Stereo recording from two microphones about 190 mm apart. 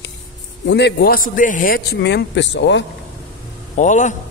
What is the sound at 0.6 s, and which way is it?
A man's voice, 65° left (ahead or behind).